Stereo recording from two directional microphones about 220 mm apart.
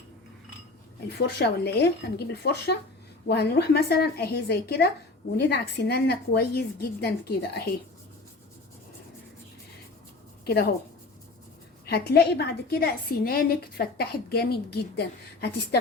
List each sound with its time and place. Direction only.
1.4 s a woman's voice: 50° left (ahead or behind)
11.9 s a woman's voice: 45° left (ahead or behind)